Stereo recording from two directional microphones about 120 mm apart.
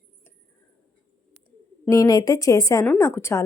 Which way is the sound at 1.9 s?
30° left (ahead or behind).